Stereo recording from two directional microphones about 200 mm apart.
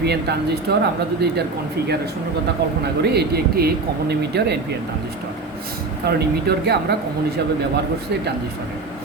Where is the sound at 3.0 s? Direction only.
55° right (ahead or behind).